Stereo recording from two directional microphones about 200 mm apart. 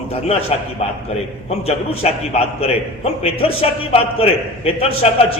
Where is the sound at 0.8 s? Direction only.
30° left (ahead or behind).